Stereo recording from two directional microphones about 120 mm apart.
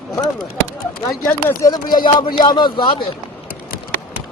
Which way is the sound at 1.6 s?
35° left (ahead or behind).